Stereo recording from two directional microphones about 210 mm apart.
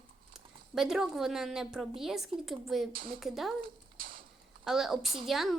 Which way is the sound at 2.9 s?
45° right (ahead or behind).